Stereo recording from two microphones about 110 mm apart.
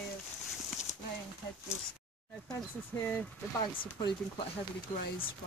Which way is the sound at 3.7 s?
50° left (ahead or behind).